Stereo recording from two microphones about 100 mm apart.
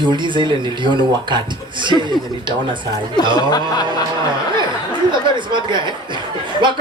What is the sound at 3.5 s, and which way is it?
Chuckle, 40° left (ahead or behind).